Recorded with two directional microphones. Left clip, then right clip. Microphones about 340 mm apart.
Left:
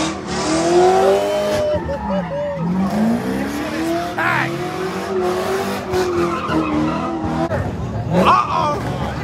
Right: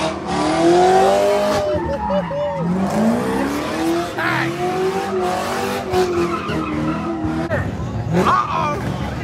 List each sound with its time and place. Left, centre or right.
0.4 s vehicle: right
3.8 s vehicle: centre
8.1 s vehicle: centre